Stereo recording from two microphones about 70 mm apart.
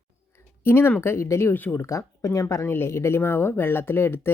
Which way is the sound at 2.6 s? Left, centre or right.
Left.